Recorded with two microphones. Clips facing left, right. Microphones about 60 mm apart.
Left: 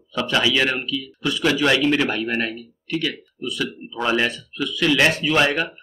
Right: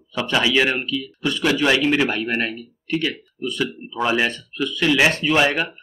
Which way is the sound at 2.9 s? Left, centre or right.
Right.